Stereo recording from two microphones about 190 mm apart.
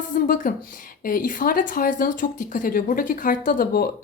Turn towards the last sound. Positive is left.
turn(degrees=50)  # may be behind; listen again after turning